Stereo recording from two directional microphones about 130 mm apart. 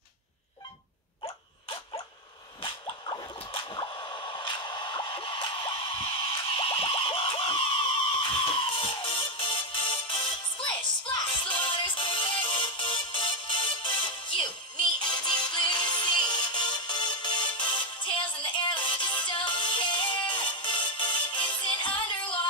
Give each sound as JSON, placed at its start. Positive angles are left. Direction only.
{"t": 1.2, "sound": "dog", "side_deg": 45}
{"t": 2.6, "sound": "a sound", "side_deg": 40}
{"t": 8.2, "sound": "music", "side_deg": 40}